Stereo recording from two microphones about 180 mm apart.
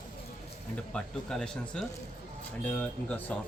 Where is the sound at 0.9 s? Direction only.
5° left (ahead or behind).